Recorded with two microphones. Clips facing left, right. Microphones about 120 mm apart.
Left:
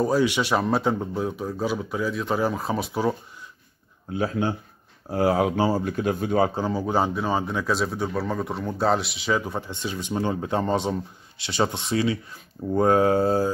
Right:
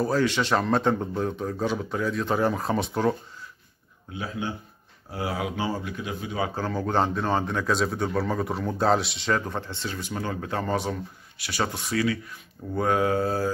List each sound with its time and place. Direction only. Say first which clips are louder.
0.0 s speech: left 2 dB; 15° left (ahead or behind)
4.1 s speech: left 7 dB; 45° left (ahead or behind)
6.5 s speech: left 2 dB; 15° left (ahead or behind)